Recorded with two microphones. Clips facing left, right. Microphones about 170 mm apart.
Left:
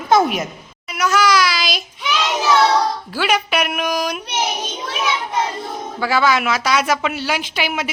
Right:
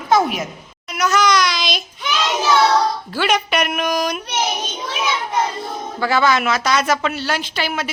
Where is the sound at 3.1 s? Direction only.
5° left (ahead or behind).